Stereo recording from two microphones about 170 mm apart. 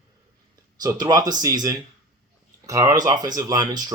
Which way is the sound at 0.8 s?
20° right (ahead or behind).